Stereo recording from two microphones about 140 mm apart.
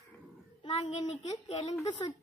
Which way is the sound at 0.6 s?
50° left (ahead or behind).